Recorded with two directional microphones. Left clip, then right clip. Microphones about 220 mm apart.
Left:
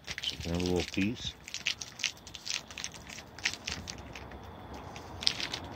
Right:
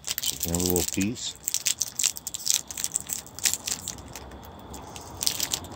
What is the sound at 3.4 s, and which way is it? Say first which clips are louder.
Crushing: right 5 dB; 15° right (ahead or behind).